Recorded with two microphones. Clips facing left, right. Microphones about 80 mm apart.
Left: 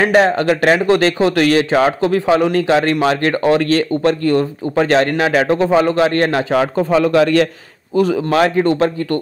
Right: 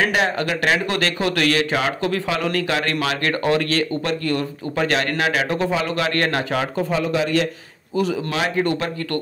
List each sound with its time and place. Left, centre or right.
0.0 s speech: left
6.9 s a man's voice: left
7.9 s a man's voice: left
8.5 s speech: left